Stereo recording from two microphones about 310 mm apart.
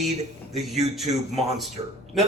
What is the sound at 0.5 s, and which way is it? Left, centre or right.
Speech, centre.